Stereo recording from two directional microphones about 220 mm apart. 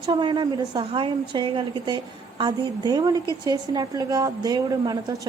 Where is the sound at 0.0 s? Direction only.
20° right (ahead or behind).